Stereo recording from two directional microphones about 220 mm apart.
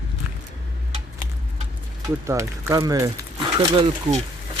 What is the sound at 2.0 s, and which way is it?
Speech, 15° right (ahead or behind).